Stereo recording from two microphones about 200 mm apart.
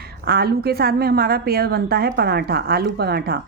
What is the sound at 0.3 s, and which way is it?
A woman's voice, 50° right (ahead or behind).